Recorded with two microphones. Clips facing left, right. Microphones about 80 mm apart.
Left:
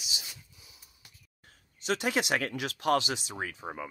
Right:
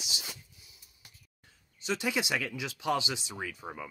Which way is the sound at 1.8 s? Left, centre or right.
Left.